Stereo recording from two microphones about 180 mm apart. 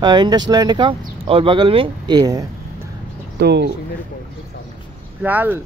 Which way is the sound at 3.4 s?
70° right (ahead or behind).